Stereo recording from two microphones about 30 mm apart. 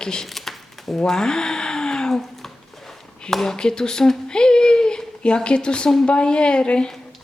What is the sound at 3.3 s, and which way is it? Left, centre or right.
Speech, centre.